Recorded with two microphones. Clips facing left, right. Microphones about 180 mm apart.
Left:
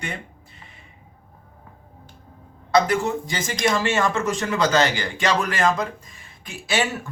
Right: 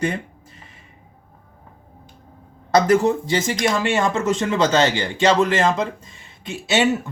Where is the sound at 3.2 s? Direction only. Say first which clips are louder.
Right 3 dB; 25° right (ahead or behind).